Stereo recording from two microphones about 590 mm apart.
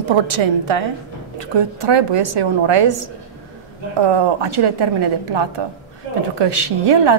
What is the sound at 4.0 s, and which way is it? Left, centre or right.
A woman's voice, right.